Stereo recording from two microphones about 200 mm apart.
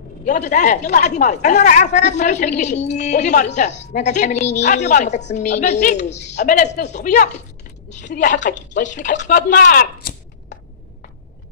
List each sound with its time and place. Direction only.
0.2 s a woman's voice: 35° left (ahead or behind)
6.0 s a woman's voice: 60° left (ahead or behind)
6.3 s a woman's voice: 40° left (ahead or behind)